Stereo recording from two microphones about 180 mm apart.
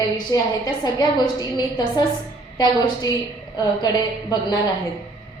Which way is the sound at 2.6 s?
25° left (ahead or behind).